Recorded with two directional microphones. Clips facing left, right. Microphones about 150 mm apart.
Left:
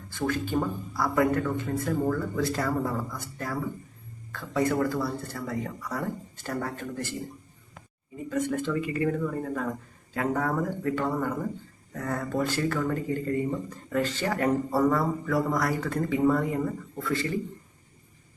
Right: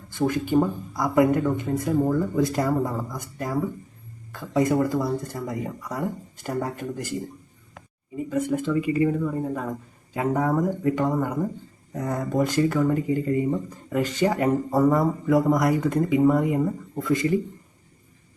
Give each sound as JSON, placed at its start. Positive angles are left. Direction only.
{"t": 0.1, "sound": "speech", "side_deg": -15}
{"t": 8.3, "sound": "speech", "side_deg": -10}